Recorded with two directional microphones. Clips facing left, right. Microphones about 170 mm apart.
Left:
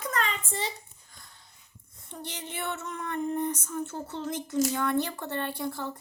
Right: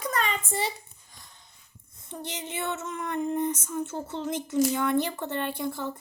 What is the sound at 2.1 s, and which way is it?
A woman's voice, 15° right (ahead or behind).